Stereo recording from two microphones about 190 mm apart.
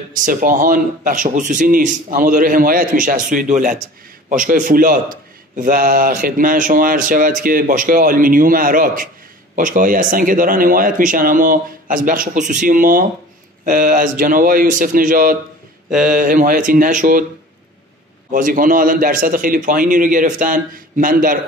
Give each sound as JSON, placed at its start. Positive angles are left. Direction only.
{"t": 0.1, "sound": "a man's voice", "side_deg": -45}
{"t": 15.9, "sound": "speech", "side_deg": -5}
{"t": 16.2, "sound": "a man's voice", "side_deg": -45}
{"t": 18.3, "sound": "a man's voice", "side_deg": -45}